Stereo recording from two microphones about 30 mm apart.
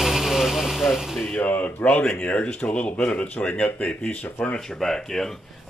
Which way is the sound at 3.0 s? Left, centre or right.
Left.